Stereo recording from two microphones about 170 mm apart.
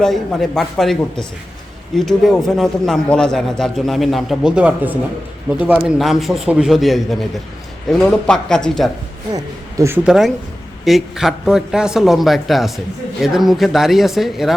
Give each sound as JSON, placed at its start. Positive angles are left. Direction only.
{"t": 0.0, "sound": "a man's voice", "side_deg": 0}
{"t": 9.3, "sound": "speech", "side_deg": -15}
{"t": 10.1, "sound": "a man's voice", "side_deg": 0}